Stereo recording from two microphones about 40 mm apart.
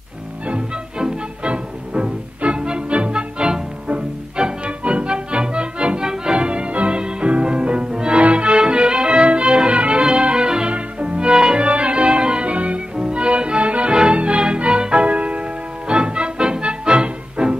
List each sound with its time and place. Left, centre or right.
0.5 s music: right
10.7 s music: right